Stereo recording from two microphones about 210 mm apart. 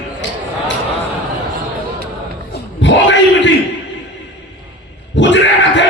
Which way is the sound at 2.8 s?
60° left (ahead or behind).